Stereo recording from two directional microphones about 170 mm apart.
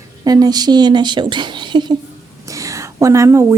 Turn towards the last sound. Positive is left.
turn(degrees=-15)  # may be behind; listen again after turning